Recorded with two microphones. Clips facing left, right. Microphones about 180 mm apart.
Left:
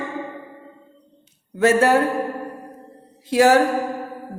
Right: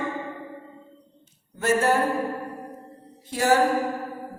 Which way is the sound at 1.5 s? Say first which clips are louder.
Left 6 dB; 80° left.